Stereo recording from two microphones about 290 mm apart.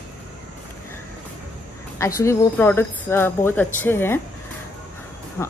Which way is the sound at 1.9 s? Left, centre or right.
Centre.